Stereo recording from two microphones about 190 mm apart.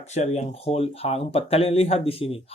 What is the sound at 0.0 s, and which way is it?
Speech, 35° left (ahead or behind).